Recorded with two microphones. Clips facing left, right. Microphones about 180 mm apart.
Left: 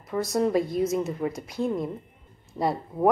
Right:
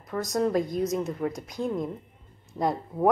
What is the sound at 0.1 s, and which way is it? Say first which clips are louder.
A woman's voice: left 2 dB; 5° left (ahead or behind).